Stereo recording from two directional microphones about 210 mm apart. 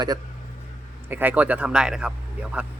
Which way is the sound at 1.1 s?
10° right (ahead or behind).